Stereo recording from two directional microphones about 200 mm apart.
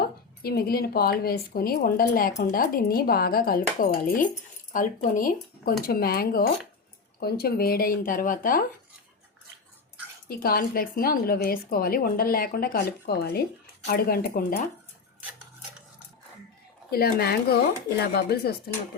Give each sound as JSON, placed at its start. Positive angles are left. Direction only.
{"t": 0.0, "sound": "speech", "side_deg": 50}
{"t": 10.2, "sound": "speech", "side_deg": 50}
{"t": 16.9, "sound": "speech", "side_deg": 50}